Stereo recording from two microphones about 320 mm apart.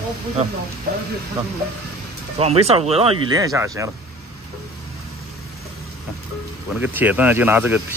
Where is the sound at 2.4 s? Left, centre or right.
Centre.